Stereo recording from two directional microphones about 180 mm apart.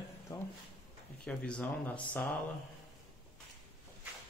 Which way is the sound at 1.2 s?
5° left (ahead or behind).